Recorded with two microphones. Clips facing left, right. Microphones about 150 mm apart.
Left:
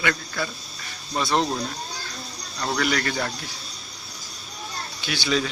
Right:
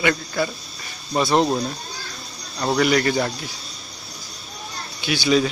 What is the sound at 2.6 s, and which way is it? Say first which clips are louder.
Speech: right 6 dB; 20° right (ahead or behind).